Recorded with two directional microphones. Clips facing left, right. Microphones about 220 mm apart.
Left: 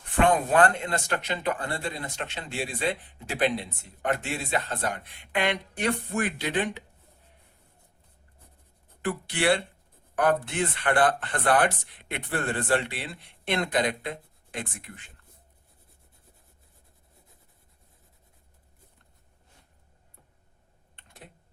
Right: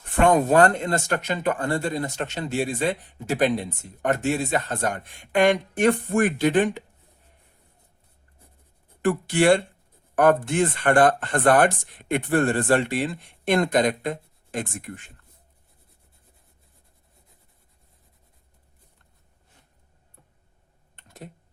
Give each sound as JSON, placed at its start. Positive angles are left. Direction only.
{"t": 0.2, "sound": "speech", "side_deg": -40}
{"t": 9.0, "sound": "speech", "side_deg": -45}
{"t": 20.9, "sound": "typing", "side_deg": -40}